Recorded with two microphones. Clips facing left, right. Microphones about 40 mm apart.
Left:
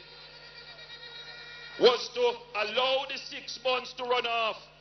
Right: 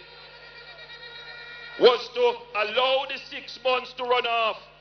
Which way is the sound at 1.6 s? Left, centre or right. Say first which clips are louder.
Right 5 dB; centre.